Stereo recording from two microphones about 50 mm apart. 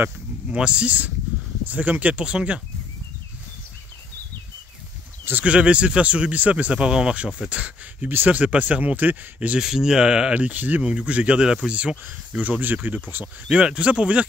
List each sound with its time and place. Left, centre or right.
0.5 s speech: right
5.3 s speech: right
9.6 s speech: centre
10.3 s speech: right
10.8 s speech: centre; by 13.0 s right
13.5 s speech: right